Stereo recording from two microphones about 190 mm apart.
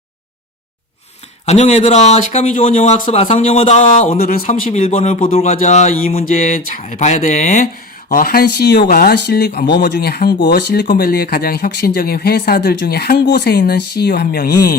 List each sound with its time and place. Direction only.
1.5 s speech: 35° left (ahead or behind)
4.4 s speech: 35° left (ahead or behind)
8.1 s speech: 50° left (ahead or behind)